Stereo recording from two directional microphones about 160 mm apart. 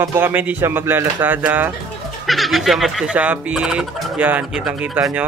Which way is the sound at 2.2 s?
Centre (ahead or behind).